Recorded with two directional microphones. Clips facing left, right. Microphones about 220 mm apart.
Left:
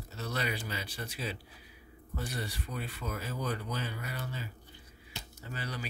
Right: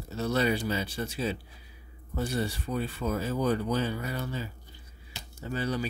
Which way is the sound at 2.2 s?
25° right (ahead or behind).